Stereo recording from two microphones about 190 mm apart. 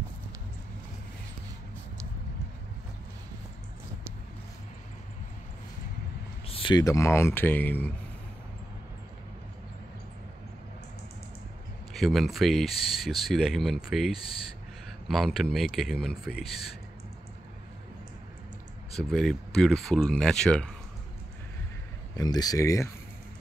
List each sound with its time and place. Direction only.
6.4 s speech: 30° left (ahead or behind); by 7.9 s 10° left (ahead or behind)
11.9 s speech: centre (ahead or behind)
18.9 s speech: centre (ahead or behind)
22.1 s speech: 20° left (ahead or behind)